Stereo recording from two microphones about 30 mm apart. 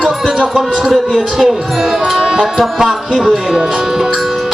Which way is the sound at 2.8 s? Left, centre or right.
Centre.